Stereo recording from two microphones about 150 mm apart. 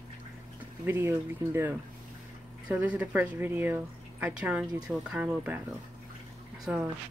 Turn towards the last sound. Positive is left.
turn(degrees=-5)  # may be behind; listen again after turning